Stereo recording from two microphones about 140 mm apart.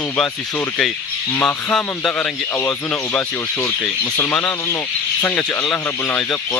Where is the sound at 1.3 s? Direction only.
10° left (ahead or behind).